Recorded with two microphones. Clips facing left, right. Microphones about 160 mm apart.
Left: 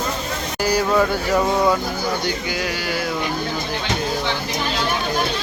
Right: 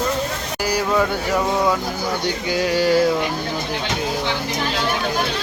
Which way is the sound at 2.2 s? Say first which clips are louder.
Right 3 dB; 30° right (ahead or behind).